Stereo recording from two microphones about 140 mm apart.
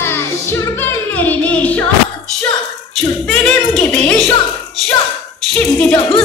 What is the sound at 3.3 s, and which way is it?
Speech, 5° left (ahead or behind).